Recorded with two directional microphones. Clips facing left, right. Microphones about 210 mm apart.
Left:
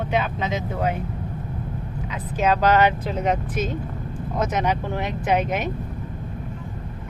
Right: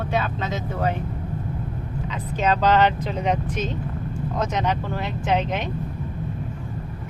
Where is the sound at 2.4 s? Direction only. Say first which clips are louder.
Left 1 dB; 10° left (ahead or behind).